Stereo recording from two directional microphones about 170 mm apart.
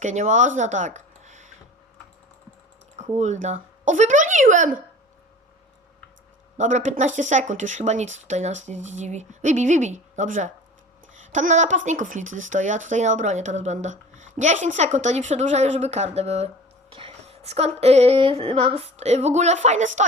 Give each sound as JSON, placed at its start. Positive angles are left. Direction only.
{"t": 0.0, "sound": "speech", "side_deg": -45}
{"t": 3.2, "sound": "speech", "side_deg": -45}
{"t": 6.6, "sound": "speech", "side_deg": -45}
{"t": 16.9, "sound": "a sound", "side_deg": -35}